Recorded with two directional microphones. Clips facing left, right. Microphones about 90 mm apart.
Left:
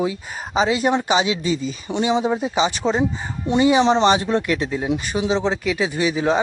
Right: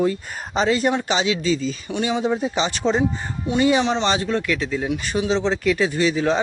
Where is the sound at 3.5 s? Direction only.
20° left (ahead or behind).